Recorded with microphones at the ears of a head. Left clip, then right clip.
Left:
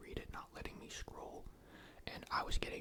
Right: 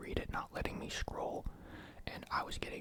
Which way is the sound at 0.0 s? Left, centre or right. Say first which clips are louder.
Right 9 dB; right.